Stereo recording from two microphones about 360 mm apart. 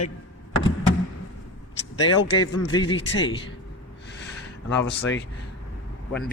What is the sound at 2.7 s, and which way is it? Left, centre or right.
Speech, centre.